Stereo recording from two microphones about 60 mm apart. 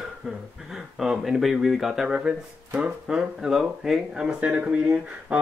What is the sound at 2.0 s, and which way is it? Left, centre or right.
Speech, centre.